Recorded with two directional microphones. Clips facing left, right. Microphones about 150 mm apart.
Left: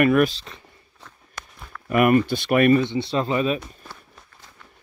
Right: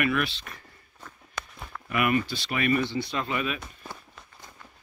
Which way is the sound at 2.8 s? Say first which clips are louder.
Left 6 dB; 25° left (ahead or behind).